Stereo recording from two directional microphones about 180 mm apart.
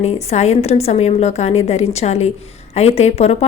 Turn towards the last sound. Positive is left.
turn(degrees=35)  # may be behind; listen again after turning